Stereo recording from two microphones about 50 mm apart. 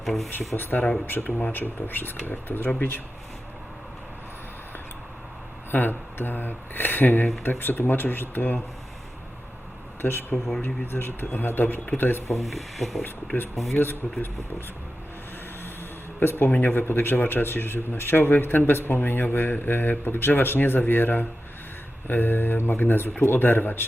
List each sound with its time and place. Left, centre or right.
0.0 s speech: centre
0.3 s a man's voice: left
5.7 s a man's voice: left
10.0 s a man's voice: left
12.4 s speech: centre
13.7 s a man's voice: left
16.2 s a man's voice: left